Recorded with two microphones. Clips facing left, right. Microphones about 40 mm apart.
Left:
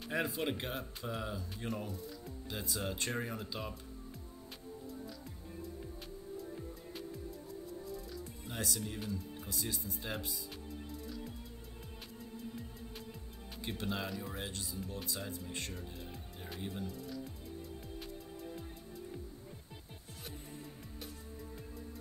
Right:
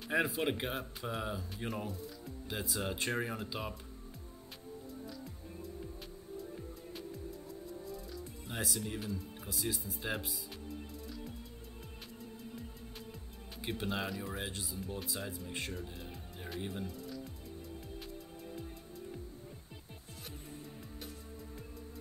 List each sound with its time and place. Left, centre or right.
0.3 s speech: centre
8.5 s speech: centre
13.6 s speech: centre